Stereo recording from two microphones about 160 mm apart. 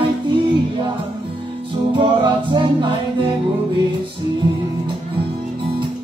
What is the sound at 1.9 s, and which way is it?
Music, 30° right (ahead or behind).